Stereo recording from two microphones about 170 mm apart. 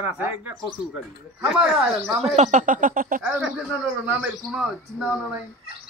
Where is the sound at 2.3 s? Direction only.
45° right (ahead or behind).